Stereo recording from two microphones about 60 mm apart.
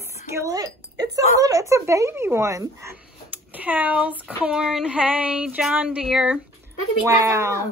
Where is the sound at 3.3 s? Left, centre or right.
Right.